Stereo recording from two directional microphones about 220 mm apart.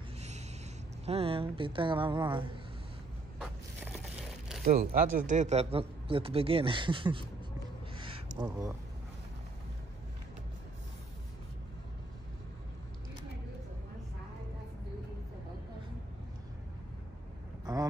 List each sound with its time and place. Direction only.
1.0 s speech: 25° right (ahead or behind)
4.6 s speech: 40° right (ahead or behind); by 7.2 s 20° right (ahead or behind)
8.0 s a sound: 20° right (ahead or behind)